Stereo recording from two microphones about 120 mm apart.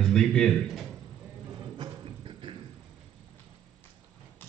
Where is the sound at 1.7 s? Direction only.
45° right (ahead or behind).